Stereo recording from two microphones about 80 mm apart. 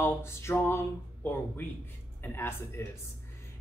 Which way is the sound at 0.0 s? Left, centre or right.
Left.